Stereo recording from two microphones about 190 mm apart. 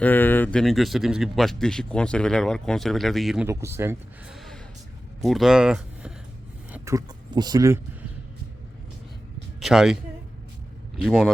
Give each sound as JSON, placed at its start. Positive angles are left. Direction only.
{"t": 0.0, "sound": "speech", "side_deg": 10}
{"t": 3.4, "sound": "speech", "side_deg": -15}
{"t": 4.4, "sound": "gasp", "side_deg": 0}
{"t": 5.2, "sound": "speech", "side_deg": 0}
{"t": 9.6, "sound": "speech", "side_deg": 0}
{"t": 11.0, "sound": "speech", "side_deg": 0}